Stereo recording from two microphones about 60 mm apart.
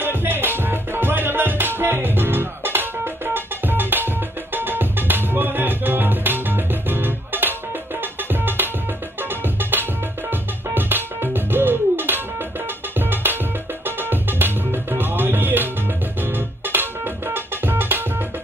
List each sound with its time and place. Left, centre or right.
0.0 s music: right